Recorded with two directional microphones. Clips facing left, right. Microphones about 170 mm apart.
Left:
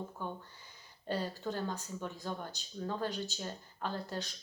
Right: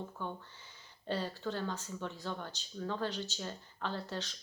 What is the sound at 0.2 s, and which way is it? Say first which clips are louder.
Speech: even; 10° left (ahead or behind).